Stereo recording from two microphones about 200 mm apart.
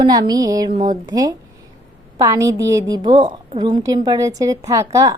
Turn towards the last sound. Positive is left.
turn(degrees=-15)  # may be behind; listen again after turning